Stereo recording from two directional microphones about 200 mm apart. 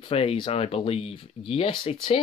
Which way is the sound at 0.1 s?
30° left (ahead or behind).